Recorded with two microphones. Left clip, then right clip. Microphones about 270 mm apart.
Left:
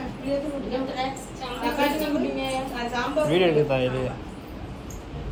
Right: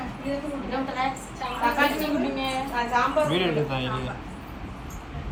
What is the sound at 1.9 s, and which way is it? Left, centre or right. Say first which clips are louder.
A woman's voice: left 1 dB; centre.